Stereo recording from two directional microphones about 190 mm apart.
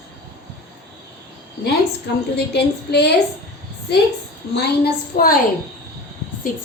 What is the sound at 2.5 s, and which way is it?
Speech, 60° left (ahead or behind).